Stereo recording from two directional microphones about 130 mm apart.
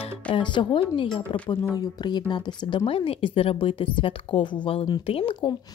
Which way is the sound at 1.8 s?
35° left (ahead or behind).